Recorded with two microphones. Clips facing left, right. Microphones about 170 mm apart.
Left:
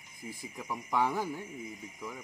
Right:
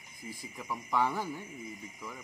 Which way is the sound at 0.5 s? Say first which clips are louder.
Even; 10° left (ahead or behind).